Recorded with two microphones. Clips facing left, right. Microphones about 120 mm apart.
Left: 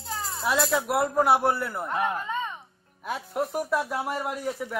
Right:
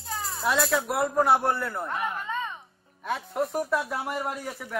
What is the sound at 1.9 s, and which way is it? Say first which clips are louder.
Speech: left 8 dB; 30° left (ahead or behind).